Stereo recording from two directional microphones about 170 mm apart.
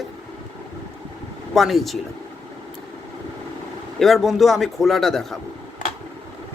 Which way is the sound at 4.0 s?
Centre (ahead or behind).